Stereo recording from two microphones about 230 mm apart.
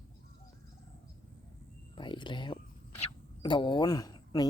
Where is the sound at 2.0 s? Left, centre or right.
Left.